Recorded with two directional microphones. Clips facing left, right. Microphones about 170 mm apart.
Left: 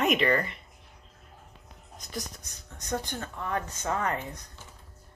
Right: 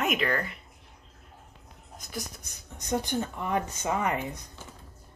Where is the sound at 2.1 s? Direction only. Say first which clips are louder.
Even; 10° right (ahead or behind).